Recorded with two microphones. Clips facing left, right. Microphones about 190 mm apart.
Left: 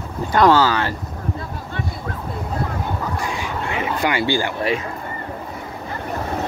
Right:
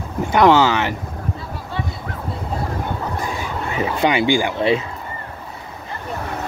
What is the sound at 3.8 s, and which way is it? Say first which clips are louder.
Speech: right 4 dB; 20° right (ahead or behind).